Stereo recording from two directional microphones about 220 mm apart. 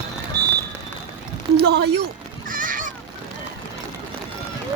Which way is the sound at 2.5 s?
35° right (ahead or behind).